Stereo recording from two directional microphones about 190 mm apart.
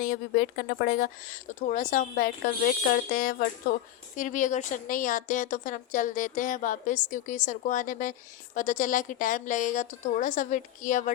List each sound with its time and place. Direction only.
0.0 s a woman's voice: 50° left (ahead or behind)